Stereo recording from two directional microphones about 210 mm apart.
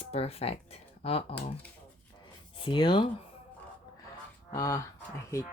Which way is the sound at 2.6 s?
20° left (ahead or behind).